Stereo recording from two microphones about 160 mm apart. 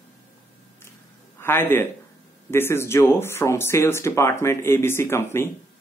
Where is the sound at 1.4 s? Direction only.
15° left (ahead or behind).